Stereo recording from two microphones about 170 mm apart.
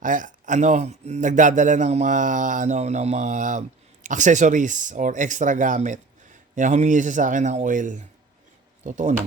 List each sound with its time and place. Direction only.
0.0 s speech: 50° right (ahead or behind)